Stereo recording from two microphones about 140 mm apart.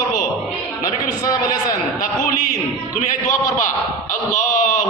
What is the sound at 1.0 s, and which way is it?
Speech, 25° left (ahead or behind).